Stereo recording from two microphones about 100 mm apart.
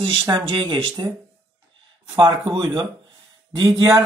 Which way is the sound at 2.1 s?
55° right (ahead or behind).